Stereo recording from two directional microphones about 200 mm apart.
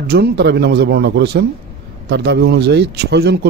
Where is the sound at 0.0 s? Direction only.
55° right (ahead or behind).